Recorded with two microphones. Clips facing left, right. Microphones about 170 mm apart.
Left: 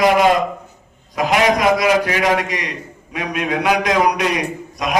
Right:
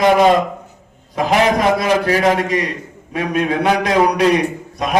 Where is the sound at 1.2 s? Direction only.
30° right (ahead or behind).